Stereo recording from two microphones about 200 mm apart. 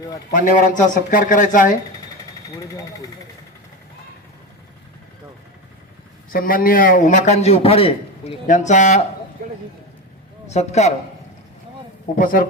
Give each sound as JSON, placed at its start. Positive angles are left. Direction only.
{"t": 0.3, "sound": "a man's voice", "side_deg": 40}
{"t": 2.5, "sound": "speech", "side_deg": 15}
{"t": 6.3, "sound": "a man's voice", "side_deg": 45}
{"t": 9.4, "sound": "a sound", "side_deg": -45}
{"t": 10.5, "sound": "a man's voice", "side_deg": 35}
{"t": 12.1, "sound": "speech", "side_deg": 45}